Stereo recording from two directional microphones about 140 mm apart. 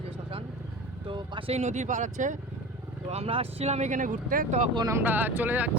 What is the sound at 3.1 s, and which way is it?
Speech, 45° right (ahead or behind).